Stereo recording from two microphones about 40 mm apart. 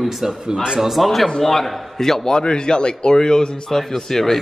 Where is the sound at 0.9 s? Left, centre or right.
Centre.